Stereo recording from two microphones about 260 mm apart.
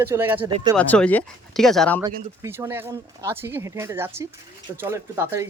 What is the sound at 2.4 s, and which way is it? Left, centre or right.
Speech, centre.